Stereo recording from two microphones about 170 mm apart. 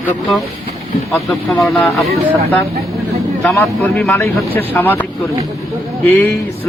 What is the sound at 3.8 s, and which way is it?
Speech, 10° left (ahead or behind).